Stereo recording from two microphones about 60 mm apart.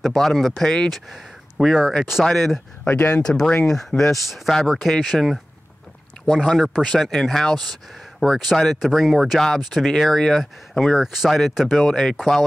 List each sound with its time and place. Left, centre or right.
0.0 s speech: centre
1.6 s speech: centre
2.2 s speech: centre
2.8 s speech: left
3.2 s speech: centre
6.4 s speech: centre
11.0 s speech: centre
11.9 s speech: centre